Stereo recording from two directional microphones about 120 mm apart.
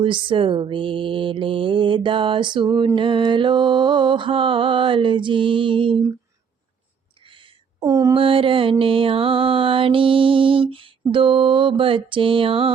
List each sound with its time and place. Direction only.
0.0 s mantra: 45° right (ahead or behind)
7.8 s mantra: 25° right (ahead or behind)
8.1 s mantra: 45° right (ahead or behind)